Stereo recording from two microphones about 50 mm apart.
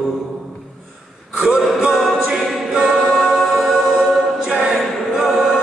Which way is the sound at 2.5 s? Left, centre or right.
Centre.